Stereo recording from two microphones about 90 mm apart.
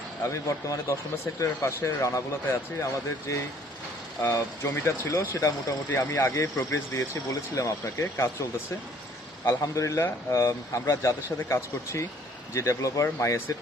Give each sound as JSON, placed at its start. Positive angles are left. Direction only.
{"t": 0.2, "sound": "speech", "side_deg": 35}
{"t": 4.6, "sound": "speech", "side_deg": 30}
{"t": 9.5, "sound": "speech", "side_deg": 35}